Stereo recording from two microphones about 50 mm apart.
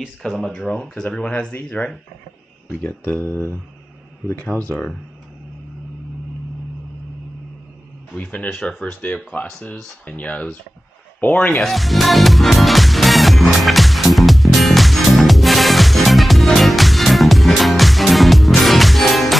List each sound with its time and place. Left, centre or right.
0.2 s speech: centre; by 4.6 s left
4.6 s speech: centre
8.1 s speech: left
11.5 s music: centre